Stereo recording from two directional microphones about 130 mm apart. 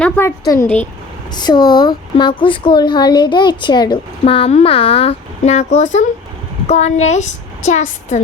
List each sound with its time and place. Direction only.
0.0 s a woman's voice: 15° left (ahead or behind)
1.4 s a woman's voice: 35° left (ahead or behind); by 8.2 s 65° left (ahead or behind)